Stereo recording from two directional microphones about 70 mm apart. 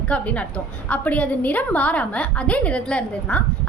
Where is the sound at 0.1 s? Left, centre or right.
Centre.